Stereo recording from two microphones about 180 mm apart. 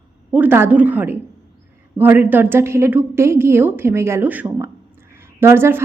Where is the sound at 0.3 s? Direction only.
10° right (ahead or behind).